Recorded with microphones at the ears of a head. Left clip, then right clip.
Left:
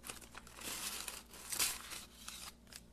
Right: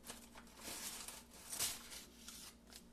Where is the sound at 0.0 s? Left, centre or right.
Left.